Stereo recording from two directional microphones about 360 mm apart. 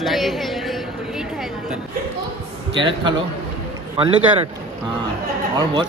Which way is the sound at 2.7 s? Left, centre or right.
Centre.